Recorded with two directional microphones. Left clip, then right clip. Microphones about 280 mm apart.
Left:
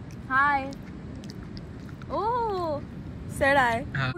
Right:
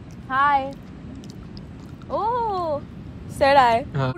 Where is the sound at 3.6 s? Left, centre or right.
Right.